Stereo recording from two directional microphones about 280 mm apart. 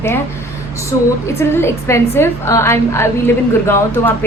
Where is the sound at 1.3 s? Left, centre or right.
Centre.